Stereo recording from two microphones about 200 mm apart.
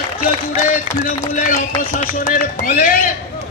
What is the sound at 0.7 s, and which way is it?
Speech, 40° left (ahead or behind).